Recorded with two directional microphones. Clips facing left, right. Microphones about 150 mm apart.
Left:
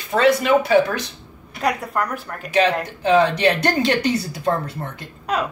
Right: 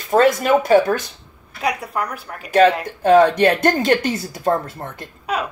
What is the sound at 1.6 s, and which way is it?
Speech, 5° right (ahead or behind).